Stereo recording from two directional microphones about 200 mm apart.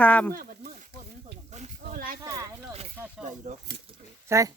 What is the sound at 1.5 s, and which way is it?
Snake, 40° right (ahead or behind).